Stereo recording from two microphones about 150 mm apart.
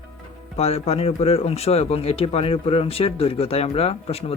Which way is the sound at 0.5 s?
45° left (ahead or behind).